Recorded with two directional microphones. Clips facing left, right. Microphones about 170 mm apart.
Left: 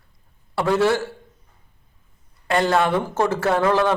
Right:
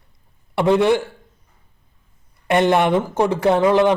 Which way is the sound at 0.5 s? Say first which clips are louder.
Right 3 dB; 20° right (ahead or behind).